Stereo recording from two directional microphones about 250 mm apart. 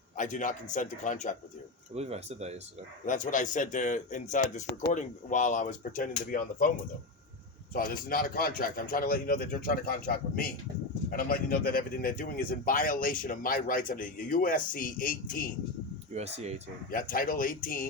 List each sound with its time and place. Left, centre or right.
0.2 s a man's voice: left
2.0 s speech: right
3.1 s a man's voice: left
7.7 s a man's voice: left
16.1 s speech: right
16.9 s a man's voice: left